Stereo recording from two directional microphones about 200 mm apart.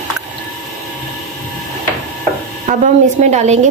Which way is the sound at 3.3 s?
35° right (ahead or behind).